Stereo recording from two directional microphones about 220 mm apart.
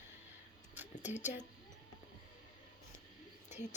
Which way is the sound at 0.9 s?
30° left (ahead or behind).